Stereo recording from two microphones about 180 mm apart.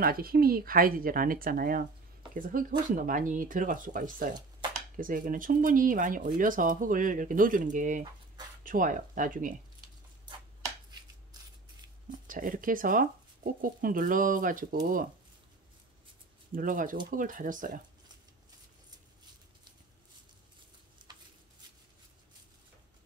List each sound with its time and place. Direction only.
0.0 s speech: 55° right (ahead or behind)
12.3 s speech: 50° right (ahead or behind)
16.5 s speech: 50° right (ahead or behind)
21.0 s a sound: 25° right (ahead or behind)